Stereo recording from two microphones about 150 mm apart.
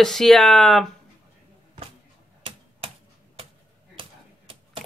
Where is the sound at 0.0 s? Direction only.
Centre (ahead or behind).